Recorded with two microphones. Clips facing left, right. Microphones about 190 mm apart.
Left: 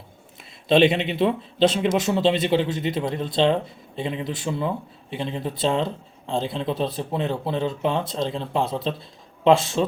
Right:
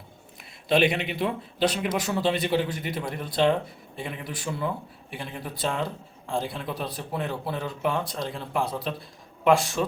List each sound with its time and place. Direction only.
0.7 s a man's voice: 25° left (ahead or behind)